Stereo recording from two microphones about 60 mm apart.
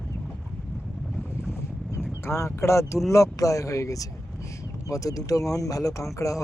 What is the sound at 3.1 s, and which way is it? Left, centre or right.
Speech, left.